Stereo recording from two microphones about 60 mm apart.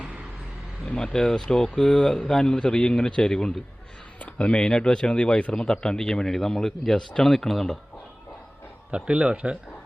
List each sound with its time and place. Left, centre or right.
0.9 s speech: centre
9.0 s a man's voice: centre